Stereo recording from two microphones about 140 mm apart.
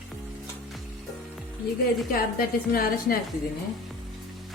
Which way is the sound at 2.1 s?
90° left.